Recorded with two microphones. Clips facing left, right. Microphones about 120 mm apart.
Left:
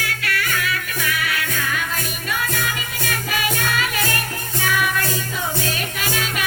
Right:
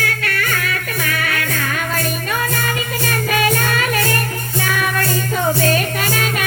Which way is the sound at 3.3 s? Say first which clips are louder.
Right 5 dB; 50° right (ahead or behind).